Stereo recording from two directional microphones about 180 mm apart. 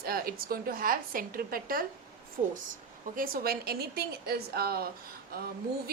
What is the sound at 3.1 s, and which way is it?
A woman's voice, 55° right (ahead or behind).